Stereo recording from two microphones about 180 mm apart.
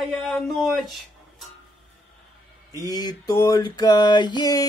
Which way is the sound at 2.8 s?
20° left (ahead or behind).